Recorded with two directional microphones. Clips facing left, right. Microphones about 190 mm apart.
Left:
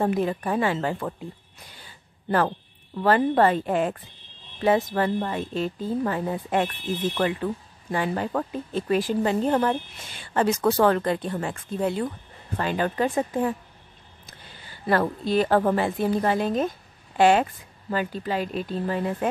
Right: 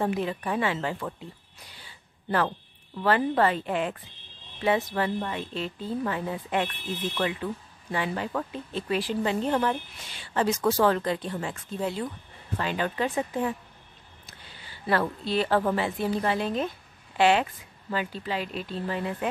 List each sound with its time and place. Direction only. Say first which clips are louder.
0.0 s speech: left 4 dB; 45° left (ahead or behind)
1.7 s a sound: left 2 dB; 45° left (ahead or behind)
3.0 s speech: left 4 dB; 40° left (ahead or behind)
14.7 s speech: left 3 dB; 45° left (ahead or behind)